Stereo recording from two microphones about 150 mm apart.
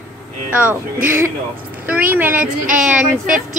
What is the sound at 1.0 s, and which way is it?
A woman's voice, 15° right (ahead or behind).